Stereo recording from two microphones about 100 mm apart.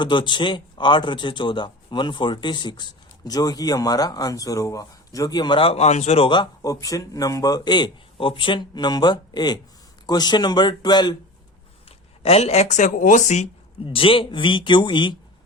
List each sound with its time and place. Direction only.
0.0 s speech: 50° left (ahead or behind)
5.5 s speech: 80° left
6.6 s speech: 35° left (ahead or behind)
11.9 s a sound: 90° left
13.8 s speech: 65° left (ahead or behind)